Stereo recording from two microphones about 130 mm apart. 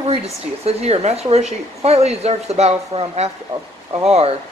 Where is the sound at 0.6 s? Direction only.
55° right (ahead or behind).